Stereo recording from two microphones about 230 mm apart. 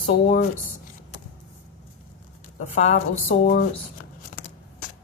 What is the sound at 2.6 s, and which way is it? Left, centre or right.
A woman's voice, left.